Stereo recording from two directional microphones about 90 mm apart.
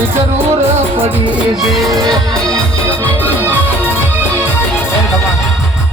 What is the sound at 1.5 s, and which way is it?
Music, centre (ahead or behind).